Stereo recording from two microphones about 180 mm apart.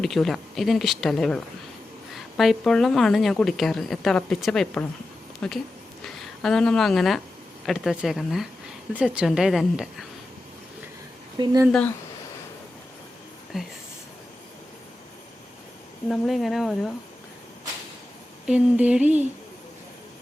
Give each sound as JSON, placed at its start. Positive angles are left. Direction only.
{"t": 0.0, "sound": "a woman's voice", "side_deg": 0}
{"t": 11.4, "sound": "speech", "side_deg": -25}
{"t": 13.5, "sound": "speech", "side_deg": 0}
{"t": 16.0, "sound": "a woman's voice", "side_deg": 0}
{"t": 18.4, "sound": "a sound", "side_deg": -5}